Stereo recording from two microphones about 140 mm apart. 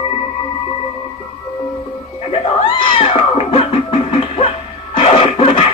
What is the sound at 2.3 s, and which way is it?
Cat, 35° left (ahead or behind).